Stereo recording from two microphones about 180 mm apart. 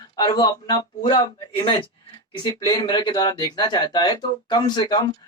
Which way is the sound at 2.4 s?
20° left (ahead or behind).